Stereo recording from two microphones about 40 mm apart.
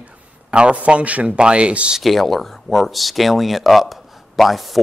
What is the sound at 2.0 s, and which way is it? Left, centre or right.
Speech, centre.